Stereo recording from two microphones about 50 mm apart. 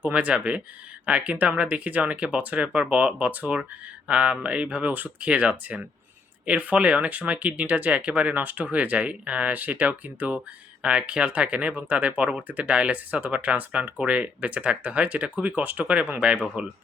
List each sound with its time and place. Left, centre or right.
0.1 s speech: right